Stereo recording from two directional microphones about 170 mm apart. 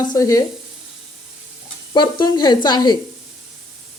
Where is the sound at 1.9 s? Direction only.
25° left (ahead or behind).